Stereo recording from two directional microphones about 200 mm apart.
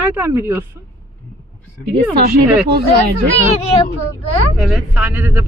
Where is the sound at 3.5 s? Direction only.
30° left (ahead or behind).